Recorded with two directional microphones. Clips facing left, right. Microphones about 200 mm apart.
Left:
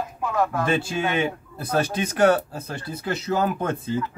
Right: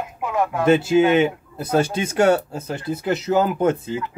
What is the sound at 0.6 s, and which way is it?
A man's voice, 20° right (ahead or behind).